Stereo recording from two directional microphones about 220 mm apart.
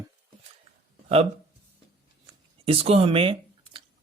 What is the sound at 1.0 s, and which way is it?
Speech, 30° right (ahead or behind).